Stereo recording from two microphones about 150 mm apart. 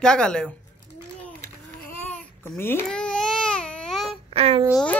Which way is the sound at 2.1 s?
10° left (ahead or behind).